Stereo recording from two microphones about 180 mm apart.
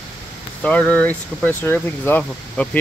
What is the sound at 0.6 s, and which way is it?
Speech, 5° left (ahead or behind).